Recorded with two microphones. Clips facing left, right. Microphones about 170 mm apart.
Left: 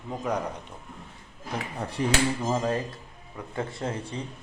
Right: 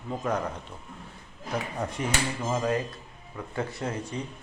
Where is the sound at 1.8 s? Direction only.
30° left (ahead or behind).